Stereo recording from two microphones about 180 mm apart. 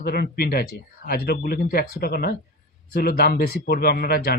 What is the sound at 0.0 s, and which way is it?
Speech, 60° left (ahead or behind).